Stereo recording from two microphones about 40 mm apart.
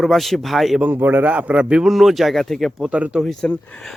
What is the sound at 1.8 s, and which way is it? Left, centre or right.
Speech, centre.